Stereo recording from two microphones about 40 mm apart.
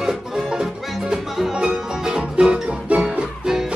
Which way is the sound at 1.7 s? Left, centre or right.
Centre.